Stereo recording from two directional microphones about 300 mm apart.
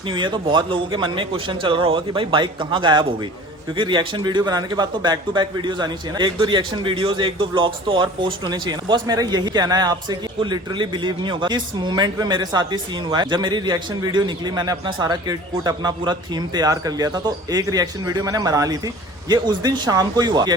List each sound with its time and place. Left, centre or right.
0.1 s a man's voice: centre